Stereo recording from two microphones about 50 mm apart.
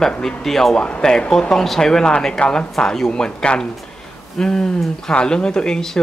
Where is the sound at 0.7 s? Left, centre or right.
Centre.